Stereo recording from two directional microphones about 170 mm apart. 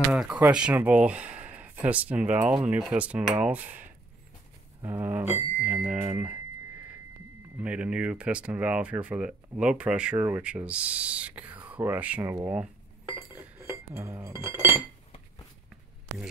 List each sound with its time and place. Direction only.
0.1 s speech: 5° right (ahead or behind)
4.8 s speech: 10° right (ahead or behind)
7.5 s speech: 5° right (ahead or behind)
13.3 s cutlery: 15° right (ahead or behind)